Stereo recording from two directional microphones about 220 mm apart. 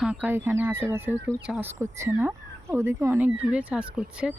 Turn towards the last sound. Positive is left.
turn(degrees=-5)  # may be behind; listen again after turning